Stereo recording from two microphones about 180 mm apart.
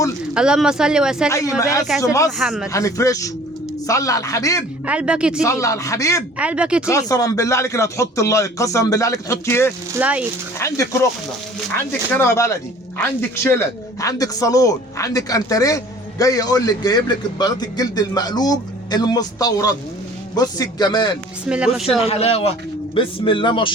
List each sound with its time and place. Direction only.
0.3 s speech: 5° right (ahead or behind)
1.3 s speech: 15° left (ahead or behind)
2.4 s speech: 5° right (ahead or behind)
2.7 s speech: 15° left (ahead or behind)
4.9 s speech: 5° right (ahead or behind)
5.4 s speech: 15° left (ahead or behind)
6.4 s speech: 5° right (ahead or behind)
6.8 s speech: 20° left (ahead or behind)
9.9 s speech: 10° right (ahead or behind)
11.9 s speech: 10° left (ahead or behind)
21.4 s speech: 5° right (ahead or behind)
22.0 s speech: 35° left (ahead or behind)